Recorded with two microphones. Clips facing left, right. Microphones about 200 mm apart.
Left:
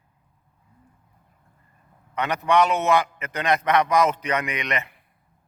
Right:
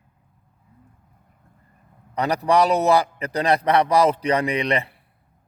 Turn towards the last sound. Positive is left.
turn(degrees=-30)  # may be behind; listen again after turning